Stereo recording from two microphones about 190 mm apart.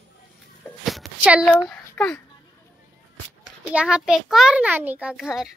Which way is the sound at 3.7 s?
5° right (ahead or behind).